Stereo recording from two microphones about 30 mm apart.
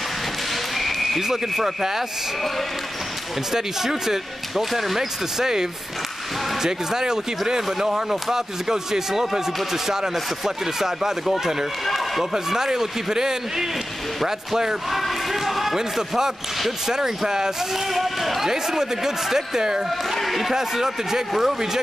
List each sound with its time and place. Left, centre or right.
0.7 s a sound: centre
1.8 s speech: centre
3.5 s speech: centre
11.8 s run: centre
12.2 s speech: centre
14.9 s basketball bounce: centre
16.8 s speech: centre
17.9 s speech: centre
18.5 s speech: centre
20.2 s a man's voice: centre
20.5 s speech: centre
21.3 s speech: centre